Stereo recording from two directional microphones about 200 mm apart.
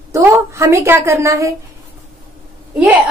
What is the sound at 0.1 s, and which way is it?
A woman's voice, 15° right (ahead or behind).